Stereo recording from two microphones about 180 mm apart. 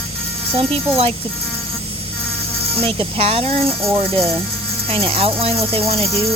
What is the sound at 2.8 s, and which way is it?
Speech, 30° right (ahead or behind).